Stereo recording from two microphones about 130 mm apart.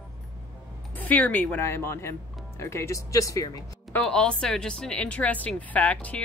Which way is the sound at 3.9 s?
10° left (ahead or behind).